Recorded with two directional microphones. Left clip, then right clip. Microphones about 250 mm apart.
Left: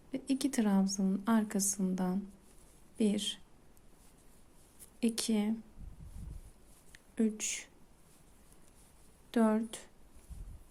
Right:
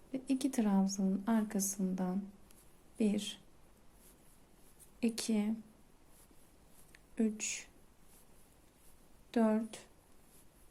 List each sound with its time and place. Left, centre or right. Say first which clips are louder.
0.1 s a woman's voice: left 2 dB; centre
4.9 s speech: left 2 dB; centre
6.9 s a sound: left 2 dB; centre
9.3 s speech: left 2 dB; centre